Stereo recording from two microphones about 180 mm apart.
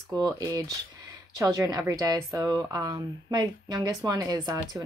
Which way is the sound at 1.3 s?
20° right (ahead or behind).